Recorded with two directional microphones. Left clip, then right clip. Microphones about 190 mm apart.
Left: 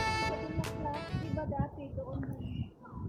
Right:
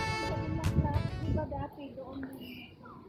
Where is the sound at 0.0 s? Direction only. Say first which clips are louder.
Left 2 dB; centre (ahead or behind).